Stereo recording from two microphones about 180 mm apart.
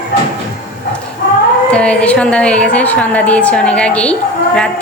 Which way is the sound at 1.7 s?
5° left (ahead or behind).